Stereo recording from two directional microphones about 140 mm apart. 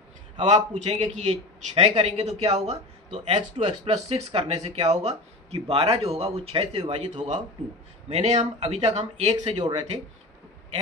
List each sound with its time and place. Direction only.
0.4 s a man's voice: 55° right (ahead or behind)
9.6 s speech: 35° right (ahead or behind)